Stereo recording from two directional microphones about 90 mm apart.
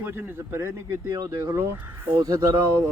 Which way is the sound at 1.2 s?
35° right (ahead or behind).